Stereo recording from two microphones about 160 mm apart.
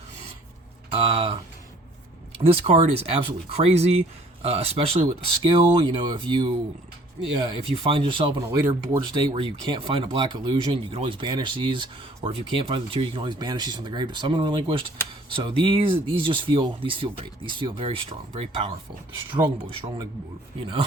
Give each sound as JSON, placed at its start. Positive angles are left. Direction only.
{"t": 0.9, "sound": "a sound", "side_deg": -35}
{"t": 2.3, "sound": "speech", "side_deg": -35}
{"t": 8.4, "sound": "speech", "side_deg": -15}
{"t": 9.1, "sound": "speech", "side_deg": -30}